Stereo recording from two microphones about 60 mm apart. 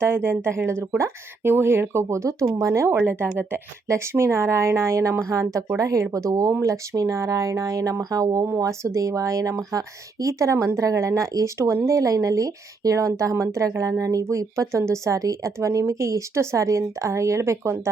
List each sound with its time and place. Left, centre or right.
0.0 s a woman's voice: right
1.5 s a woman's voice: right
3.1 s speech: right
3.8 s a woman's voice: right
14.3 s a woman's voice: right